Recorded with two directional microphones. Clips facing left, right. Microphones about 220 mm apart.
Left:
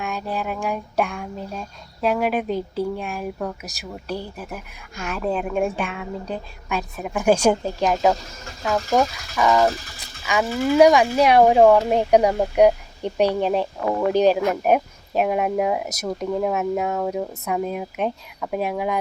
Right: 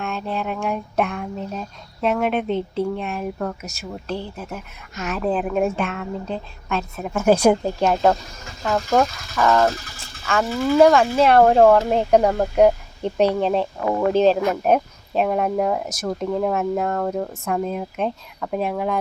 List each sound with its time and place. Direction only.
0.0 s speech: 5° left (ahead or behind)
4.9 s speech: 5° right (ahead or behind)
7.3 s speech: 10° right (ahead or behind)
8.6 s speech: 5° left (ahead or behind)